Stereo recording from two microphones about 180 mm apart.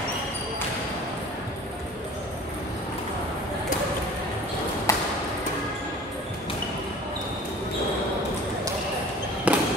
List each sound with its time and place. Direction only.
4.9 s ping: 15° left (ahead or behind)
9.5 s fireworks: 5° right (ahead or behind)